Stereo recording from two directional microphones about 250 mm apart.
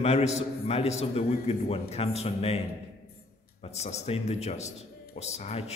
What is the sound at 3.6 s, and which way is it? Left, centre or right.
A man's voice, left.